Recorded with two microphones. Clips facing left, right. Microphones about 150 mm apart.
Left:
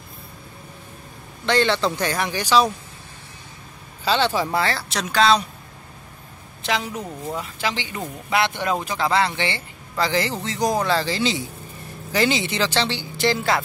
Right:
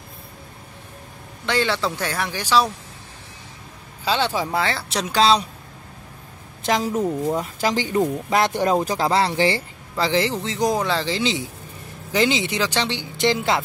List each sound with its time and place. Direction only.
1.4 s speech: 10° right (ahead or behind)
4.0 s speech: 10° right (ahead or behind)
5.1 s speech: 30° right (ahead or behind)
6.6 s a man's voice: 45° right (ahead or behind); by 13.6 s 20° right (ahead or behind)